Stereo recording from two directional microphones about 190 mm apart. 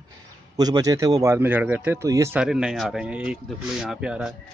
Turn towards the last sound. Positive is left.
turn(degrees=-5)  # may be behind; listen again after turning